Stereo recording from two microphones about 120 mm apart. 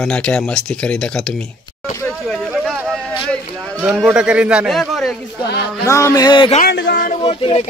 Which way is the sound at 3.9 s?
10° right (ahead or behind).